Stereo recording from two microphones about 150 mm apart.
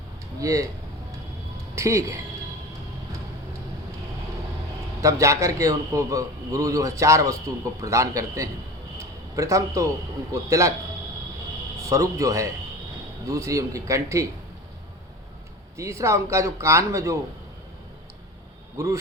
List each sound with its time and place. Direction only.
0.3 s speech: 20° right (ahead or behind)
1.7 s speech: 20° right (ahead or behind)
4.9 s a man's voice: 20° right (ahead or behind)
11.8 s a man's voice: 20° right (ahead or behind)
15.8 s a man's voice: 20° right (ahead or behind)
18.8 s a man's voice: 20° right (ahead or behind)